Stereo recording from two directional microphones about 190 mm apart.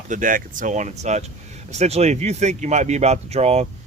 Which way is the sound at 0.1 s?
45° right (ahead or behind).